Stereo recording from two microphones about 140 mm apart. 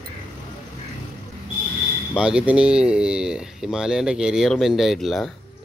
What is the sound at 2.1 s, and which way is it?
Speech, 5° right (ahead or behind).